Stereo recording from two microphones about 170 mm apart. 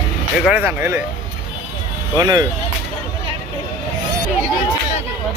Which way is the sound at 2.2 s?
25° right (ahead or behind).